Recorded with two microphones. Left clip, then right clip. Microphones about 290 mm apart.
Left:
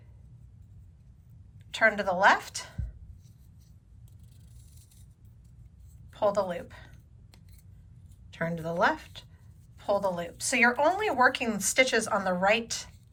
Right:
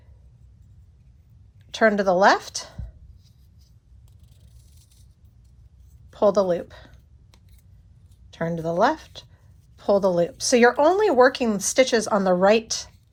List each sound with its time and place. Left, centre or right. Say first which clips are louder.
1.7 s speech: right 6 dB; centre
6.1 s speech: right 8 dB; centre
8.3 s speech: right 6 dB; centre